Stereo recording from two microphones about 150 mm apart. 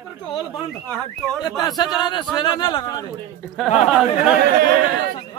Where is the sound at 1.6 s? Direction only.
25° left (ahead or behind).